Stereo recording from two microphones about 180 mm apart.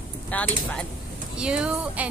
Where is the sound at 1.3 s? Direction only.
5° right (ahead or behind).